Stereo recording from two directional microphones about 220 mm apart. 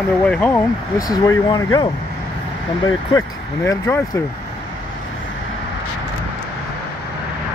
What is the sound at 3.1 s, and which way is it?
Speech, 15° left (ahead or behind).